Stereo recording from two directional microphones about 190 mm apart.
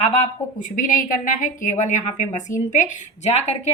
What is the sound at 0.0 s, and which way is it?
A woman's voice, 35° left (ahead or behind).